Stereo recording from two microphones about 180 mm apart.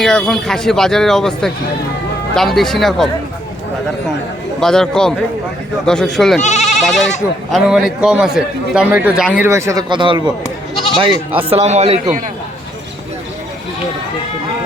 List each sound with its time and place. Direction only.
0.0 s a man's voice: 5° left (ahead or behind)
4.6 s a man's voice: 5° left (ahead or behind)
6.4 s speech: 40° left (ahead or behind)
6.8 s a man's voice: centre (ahead or behind)
9.5 s speech: 15° right (ahead or behind)
11.4 s a man's voice: 35° right (ahead or behind)